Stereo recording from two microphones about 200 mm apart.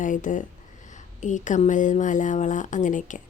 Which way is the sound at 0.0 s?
40° left (ahead or behind).